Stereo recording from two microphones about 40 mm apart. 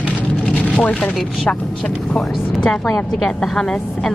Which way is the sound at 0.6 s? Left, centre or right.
Left.